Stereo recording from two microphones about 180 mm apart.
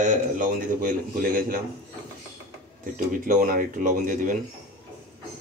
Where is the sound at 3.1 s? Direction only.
50° right (ahead or behind).